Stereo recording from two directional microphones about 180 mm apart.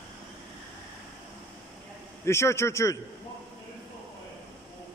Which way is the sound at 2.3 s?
15° left (ahead or behind).